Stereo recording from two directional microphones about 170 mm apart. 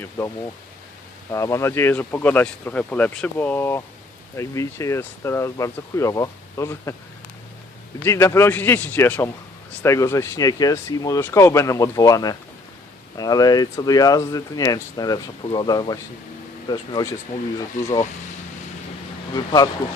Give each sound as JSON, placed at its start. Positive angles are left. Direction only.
{"t": 1.3, "sound": "speech", "side_deg": 15}
{"t": 8.0, "sound": "speech", "side_deg": 15}
{"t": 19.3, "sound": "speech", "side_deg": 25}